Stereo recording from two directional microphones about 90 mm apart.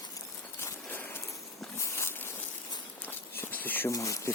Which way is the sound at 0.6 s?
25° left (ahead or behind).